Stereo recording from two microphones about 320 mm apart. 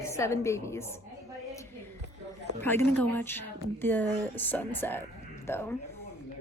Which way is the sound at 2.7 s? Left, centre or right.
Centre.